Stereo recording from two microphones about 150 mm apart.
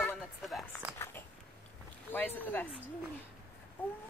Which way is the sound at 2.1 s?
10° left (ahead or behind).